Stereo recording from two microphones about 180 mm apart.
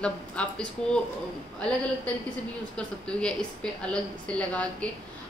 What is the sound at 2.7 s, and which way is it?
A woman's voice, 5° left (ahead or behind).